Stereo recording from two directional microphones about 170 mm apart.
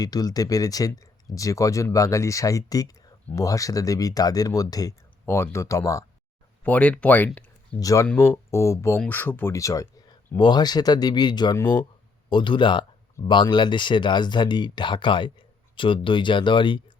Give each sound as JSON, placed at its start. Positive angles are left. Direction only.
{"t": 0.0, "sound": "speech", "side_deg": 20}
{"t": 6.7, "sound": "speech", "side_deg": 5}
{"t": 7.8, "sound": "speech", "side_deg": 20}